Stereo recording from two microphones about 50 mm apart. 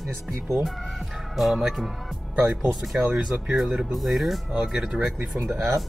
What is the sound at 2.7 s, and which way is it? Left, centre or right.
Speech, centre.